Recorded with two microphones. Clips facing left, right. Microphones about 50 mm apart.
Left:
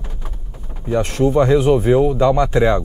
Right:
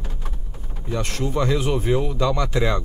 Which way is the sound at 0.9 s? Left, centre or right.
Left.